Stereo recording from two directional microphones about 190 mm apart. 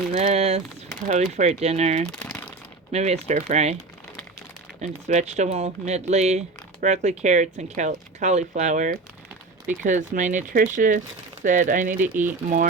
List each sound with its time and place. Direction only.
0.1 s a sound: 40° right (ahead or behind)
1.0 s speech: 35° right (ahead or behind)
2.0 s crumpling: 5° left (ahead or behind)
2.9 s speech: 35° right (ahead or behind)
4.8 s speech: 35° right (ahead or behind)
12.0 s speech: 10° right (ahead or behind)